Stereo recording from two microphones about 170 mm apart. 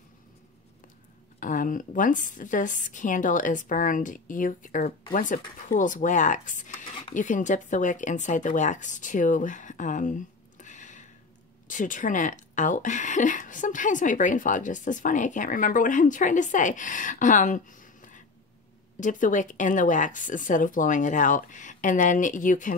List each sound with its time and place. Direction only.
1.4 s speech: 50° left (ahead or behind)
6.9 s a sound: 30° left (ahead or behind)
7.2 s speech: 50° left (ahead or behind)